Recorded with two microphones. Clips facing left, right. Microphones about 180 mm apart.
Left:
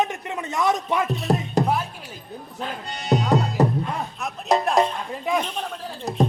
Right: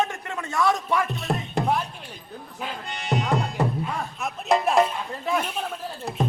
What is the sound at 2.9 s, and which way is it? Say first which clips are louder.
Speech: left 5 dB; 40° left (ahead or behind).